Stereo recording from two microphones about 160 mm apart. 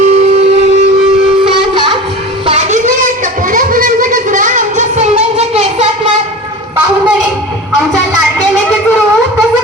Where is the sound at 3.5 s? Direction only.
60° right (ahead or behind); by 5.8 s 45° right (ahead or behind).